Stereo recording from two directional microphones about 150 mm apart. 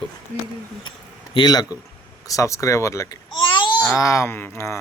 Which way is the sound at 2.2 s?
20° left (ahead or behind).